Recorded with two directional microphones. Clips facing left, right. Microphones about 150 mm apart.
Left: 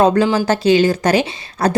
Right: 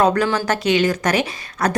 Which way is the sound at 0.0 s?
25° left (ahead or behind).